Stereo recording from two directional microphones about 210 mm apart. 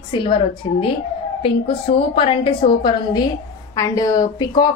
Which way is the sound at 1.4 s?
25° left (ahead or behind).